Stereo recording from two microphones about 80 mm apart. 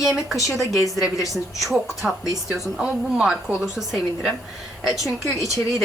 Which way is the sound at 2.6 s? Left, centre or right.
Centre.